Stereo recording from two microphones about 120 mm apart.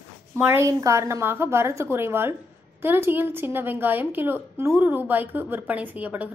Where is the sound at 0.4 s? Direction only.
20° right (ahead or behind).